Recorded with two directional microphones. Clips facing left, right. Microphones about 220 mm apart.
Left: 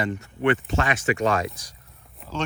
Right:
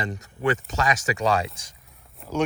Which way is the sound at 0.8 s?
30° right (ahead or behind).